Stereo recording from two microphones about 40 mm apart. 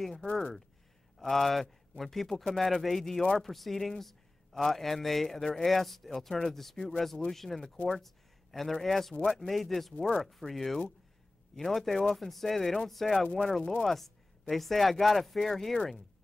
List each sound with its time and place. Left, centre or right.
0.0 s a man's voice: centre
0.3 s speech: left
1.3 s a man's voice: centre
7.6 s speech: left
8.0 s a sound: centre
8.8 s speech: centre
9.2 s speech: left
9.5 s speech: centre
9.9 s speech: left
10.5 s a man's voice: centre